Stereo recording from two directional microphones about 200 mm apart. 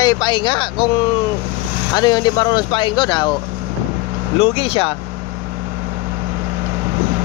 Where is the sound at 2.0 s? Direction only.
20° left (ahead or behind).